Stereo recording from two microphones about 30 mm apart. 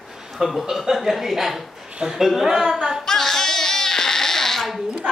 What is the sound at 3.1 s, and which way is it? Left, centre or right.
Crying, centre.